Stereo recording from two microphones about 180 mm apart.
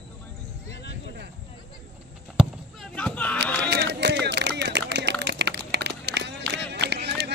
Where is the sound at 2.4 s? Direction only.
5° right (ahead or behind).